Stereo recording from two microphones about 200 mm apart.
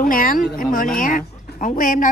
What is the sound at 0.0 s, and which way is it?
Speech, 45° left (ahead or behind).